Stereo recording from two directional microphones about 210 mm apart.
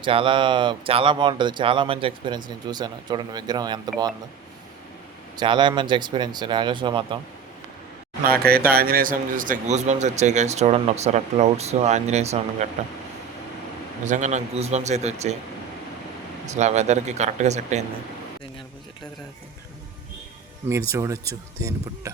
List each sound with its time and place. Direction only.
0.0 s speech: 25° right (ahead or behind)
5.4 s speech: 20° right (ahead or behind)
8.2 s a man's voice: 45° right (ahead or behind)
14.0 s a man's voice: 35° right (ahead or behind)
16.5 s a man's voice: 35° right (ahead or behind)
20.9 s speech: 15° right (ahead or behind)